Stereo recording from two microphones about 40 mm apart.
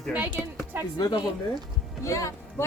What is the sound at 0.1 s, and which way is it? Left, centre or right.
Speech, right.